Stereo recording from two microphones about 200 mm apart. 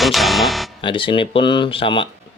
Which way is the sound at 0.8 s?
25° left (ahead or behind).